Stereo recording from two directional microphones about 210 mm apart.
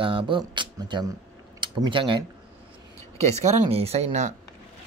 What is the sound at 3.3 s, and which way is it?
Speech, 30° right (ahead or behind).